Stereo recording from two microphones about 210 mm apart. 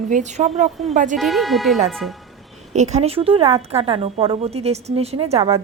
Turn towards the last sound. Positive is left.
turn(degrees=-30)  # may be behind; listen again after turning